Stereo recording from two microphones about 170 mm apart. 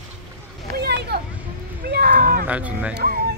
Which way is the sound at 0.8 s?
75° right (ahead or behind).